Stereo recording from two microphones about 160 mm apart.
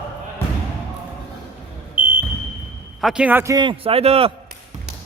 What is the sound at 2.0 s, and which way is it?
Smoke detector, 10° right (ahead or behind).